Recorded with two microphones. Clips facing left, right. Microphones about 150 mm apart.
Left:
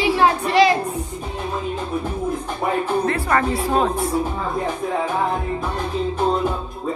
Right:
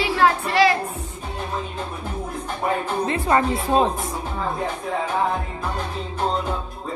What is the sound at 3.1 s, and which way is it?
Speech, 20° right (ahead or behind).